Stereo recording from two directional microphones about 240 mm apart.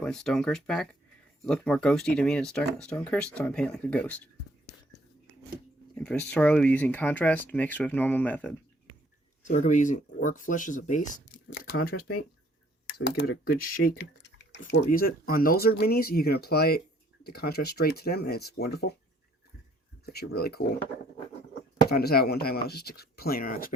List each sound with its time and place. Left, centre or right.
0.0 s speech: centre
5.9 s speech: centre
9.5 s speech: left
11.3 s a sound: left
12.9 s speech: left
13.9 s a sound: left
14.7 s speech: left
20.1 s speech: left
21.8 s speech: left